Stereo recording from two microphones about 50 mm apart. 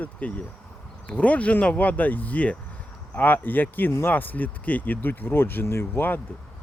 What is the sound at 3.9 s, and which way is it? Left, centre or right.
Speech, left.